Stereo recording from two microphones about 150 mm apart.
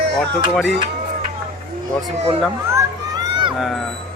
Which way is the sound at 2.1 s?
40° right (ahead or behind).